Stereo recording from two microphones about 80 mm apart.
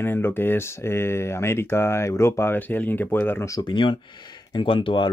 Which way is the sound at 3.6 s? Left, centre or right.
Left.